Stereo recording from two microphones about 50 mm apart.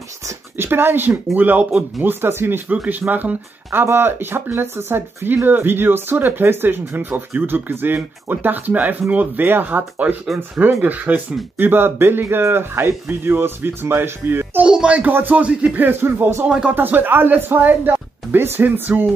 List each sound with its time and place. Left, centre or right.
0.6 s speech: right
2.0 s speech: right
2.9 s speech: right
3.8 s speech: right
14.7 s speech: centre
15.0 s speech: right
15.4 s speech: right
15.8 s speech: right
16.4 s speech: centre
16.7 s speech: right